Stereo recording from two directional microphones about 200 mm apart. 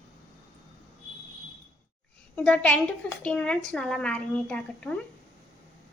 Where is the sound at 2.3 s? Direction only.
5° left (ahead or behind).